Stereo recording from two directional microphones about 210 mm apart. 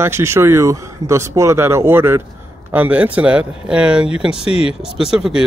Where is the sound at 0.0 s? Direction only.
10° right (ahead or behind).